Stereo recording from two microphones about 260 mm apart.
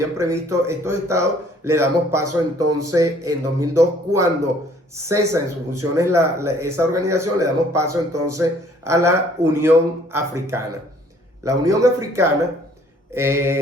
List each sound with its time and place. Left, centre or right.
0.0 s speech: centre